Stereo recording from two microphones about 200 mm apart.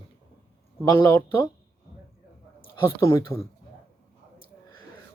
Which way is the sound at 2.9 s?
15° left (ahead or behind).